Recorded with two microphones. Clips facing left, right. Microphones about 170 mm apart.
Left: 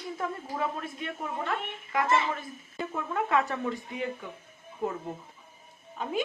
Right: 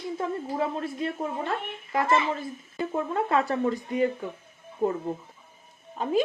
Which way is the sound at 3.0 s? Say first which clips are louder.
Right 2 dB; 35° right (ahead or behind).